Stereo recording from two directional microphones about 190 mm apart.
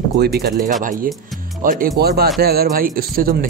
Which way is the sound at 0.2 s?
60° right (ahead or behind).